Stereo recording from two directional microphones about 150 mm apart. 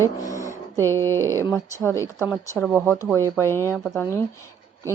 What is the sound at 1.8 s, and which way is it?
A woman's voice, 20° left (ahead or behind).